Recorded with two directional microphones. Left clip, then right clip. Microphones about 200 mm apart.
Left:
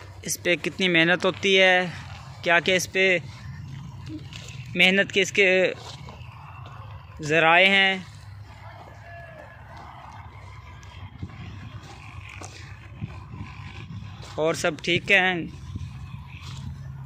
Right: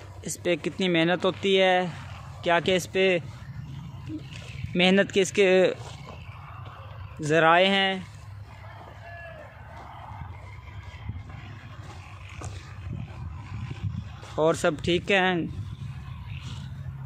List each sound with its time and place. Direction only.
0.2 s speech: 10° right (ahead or behind)
4.7 s speech: 25° right (ahead or behind)
7.2 s speech: 25° right (ahead or behind)
14.3 s speech: 25° right (ahead or behind)